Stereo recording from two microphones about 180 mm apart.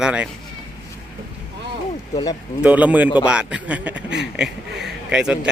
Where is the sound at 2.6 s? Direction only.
10° right (ahead or behind).